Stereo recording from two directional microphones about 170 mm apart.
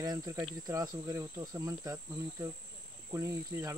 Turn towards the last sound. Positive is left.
turn(degrees=-15)  # may be behind; listen again after turning